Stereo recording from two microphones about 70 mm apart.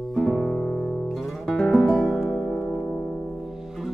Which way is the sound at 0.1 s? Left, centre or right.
Centre.